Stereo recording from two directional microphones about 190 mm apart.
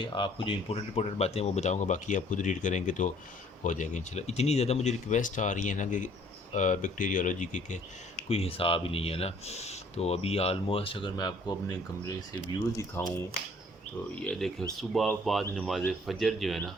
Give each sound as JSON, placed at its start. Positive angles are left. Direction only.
{"t": 0.0, "sound": "speech", "side_deg": 25}
{"t": 14.2, "sound": "speech", "side_deg": 5}